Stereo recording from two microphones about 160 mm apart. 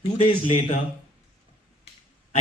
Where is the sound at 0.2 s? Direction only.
35° left (ahead or behind).